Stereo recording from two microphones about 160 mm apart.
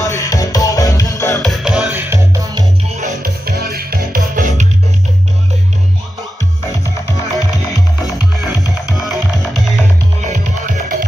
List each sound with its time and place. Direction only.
0.0 s music: 20° left (ahead or behind)
1.4 s music: centre (ahead or behind)
2.0 s music: 20° right (ahead or behind)
2.9 s music: 45° right (ahead or behind)
3.2 s music: 75° right (ahead or behind); by 4.6 s 60° right (ahead or behind)
6.7 s music: 20° left (ahead or behind)
8.5 s music: 20° left (ahead or behind)
8.9 s music: centre (ahead or behind)